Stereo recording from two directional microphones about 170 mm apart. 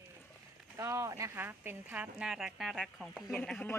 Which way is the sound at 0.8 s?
15° right (ahead or behind).